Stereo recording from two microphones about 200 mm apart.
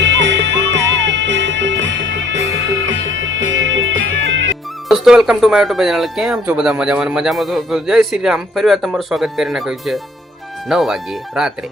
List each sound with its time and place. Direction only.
0.0 s music: 65° right (ahead or behind)
4.9 s speech: centre (ahead or behind)